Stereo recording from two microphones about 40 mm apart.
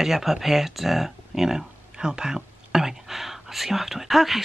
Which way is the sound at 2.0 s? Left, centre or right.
Centre.